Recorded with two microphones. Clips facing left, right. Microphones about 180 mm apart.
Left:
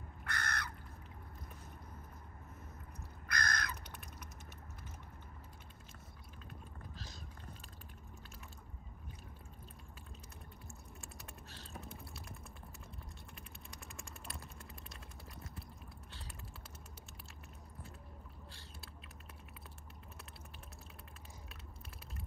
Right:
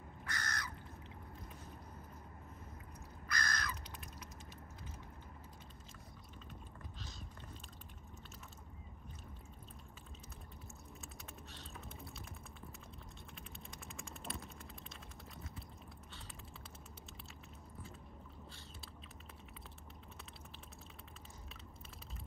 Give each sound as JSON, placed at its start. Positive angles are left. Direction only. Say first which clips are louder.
{"t": 0.2, "sound": "crow", "louder": "left 3 dB", "side_deg": 60}
{"t": 3.3, "sound": "crow", "louder": "left 2 dB", "side_deg": 55}
{"t": 13.9, "sound": "typing", "louder": "right 5 dB", "side_deg": 0}
{"t": 16.1, "sound": "typing", "louder": "left 1 dB", "side_deg": 0}